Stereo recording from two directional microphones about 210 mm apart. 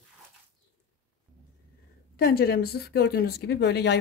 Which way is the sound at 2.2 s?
45° left (ahead or behind).